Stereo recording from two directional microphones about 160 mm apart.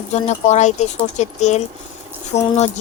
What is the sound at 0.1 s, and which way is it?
Speech, 45° left (ahead or behind).